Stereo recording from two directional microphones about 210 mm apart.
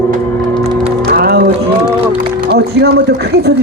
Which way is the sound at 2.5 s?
50° right (ahead or behind).